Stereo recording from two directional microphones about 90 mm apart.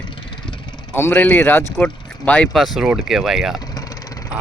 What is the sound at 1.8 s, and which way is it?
Speech, 15° left (ahead or behind).